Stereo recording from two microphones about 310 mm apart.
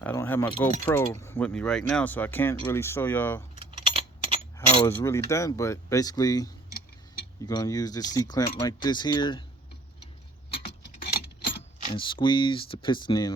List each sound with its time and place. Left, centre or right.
0.0 s speech: centre
3.6 s a sound: centre
4.5 s speech: centre
11.9 s speech: centre